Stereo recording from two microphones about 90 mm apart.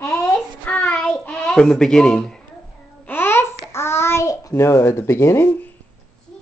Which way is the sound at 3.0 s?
25° left (ahead or behind).